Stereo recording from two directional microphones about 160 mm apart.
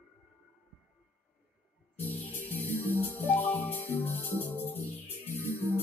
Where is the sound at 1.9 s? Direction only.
10° left (ahead or behind).